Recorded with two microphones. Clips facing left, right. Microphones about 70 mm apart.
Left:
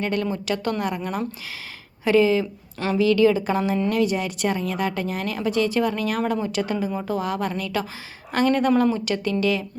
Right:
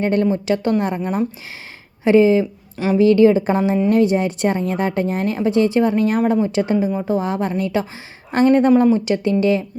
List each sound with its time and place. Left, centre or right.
0.0 s speech: right
2.7 s a woman's voice: centre
3.0 s a woman's voice: right